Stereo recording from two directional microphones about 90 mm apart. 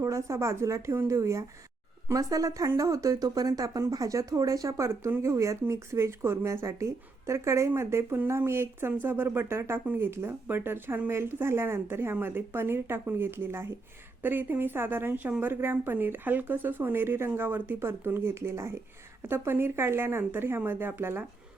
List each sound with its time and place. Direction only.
0.0 s a woman's voice: 35° right (ahead or behind)